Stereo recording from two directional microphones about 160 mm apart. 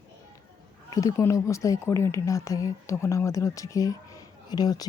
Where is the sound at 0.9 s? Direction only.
20° left (ahead or behind).